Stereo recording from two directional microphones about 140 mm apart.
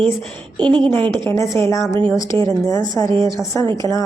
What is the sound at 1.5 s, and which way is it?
A woman's voice, 20° left (ahead or behind).